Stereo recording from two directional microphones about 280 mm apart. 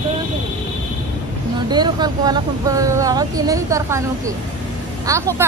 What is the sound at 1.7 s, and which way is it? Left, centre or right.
Speech, centre.